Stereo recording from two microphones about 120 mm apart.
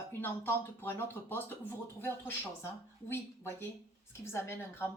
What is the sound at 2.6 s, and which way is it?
A woman's voice, 20° left (ahead or behind).